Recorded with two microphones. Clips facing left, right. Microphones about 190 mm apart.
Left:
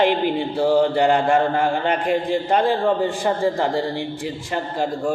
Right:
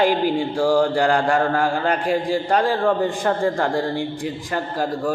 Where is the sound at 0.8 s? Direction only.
Centre (ahead or behind).